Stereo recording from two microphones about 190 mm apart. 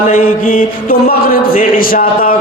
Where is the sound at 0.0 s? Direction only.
45° left (ahead or behind).